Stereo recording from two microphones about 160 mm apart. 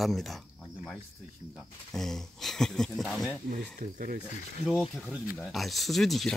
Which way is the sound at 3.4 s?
60° right (ahead or behind).